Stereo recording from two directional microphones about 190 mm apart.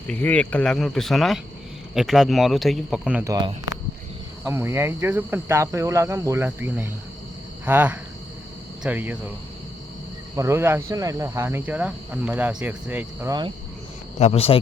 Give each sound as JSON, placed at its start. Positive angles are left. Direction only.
{"t": 0.1, "sound": "speech", "side_deg": 10}
{"t": 3.2, "sound": "speech", "side_deg": -20}
{"t": 10.3, "sound": "speech", "side_deg": -15}
{"t": 14.2, "sound": "speech", "side_deg": 35}